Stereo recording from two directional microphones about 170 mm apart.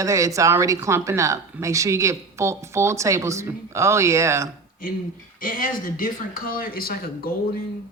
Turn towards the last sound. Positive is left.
turn(degrees=60)  # may be behind; listen again after turning